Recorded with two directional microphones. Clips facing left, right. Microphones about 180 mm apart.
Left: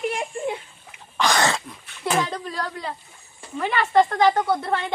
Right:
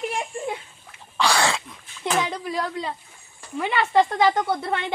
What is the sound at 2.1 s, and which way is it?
Speech, 10° right (ahead or behind).